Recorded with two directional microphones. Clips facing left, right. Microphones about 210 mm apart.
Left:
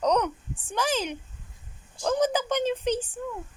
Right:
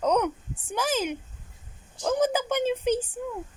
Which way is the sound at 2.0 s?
10° right (ahead or behind).